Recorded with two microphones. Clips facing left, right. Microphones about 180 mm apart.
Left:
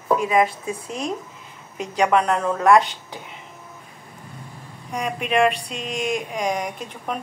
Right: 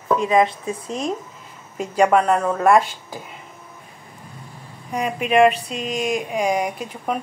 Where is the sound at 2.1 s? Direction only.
5° right (ahead or behind).